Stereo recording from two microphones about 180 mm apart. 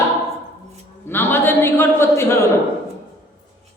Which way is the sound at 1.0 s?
10° left (ahead or behind).